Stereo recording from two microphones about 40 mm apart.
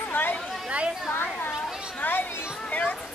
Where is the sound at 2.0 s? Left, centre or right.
Left.